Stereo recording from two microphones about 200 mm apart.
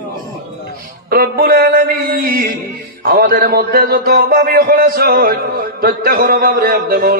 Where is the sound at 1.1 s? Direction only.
45° right (ahead or behind).